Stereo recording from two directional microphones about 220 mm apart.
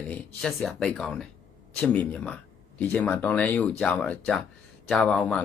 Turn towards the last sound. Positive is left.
turn(degrees=5)  # may be behind; listen again after turning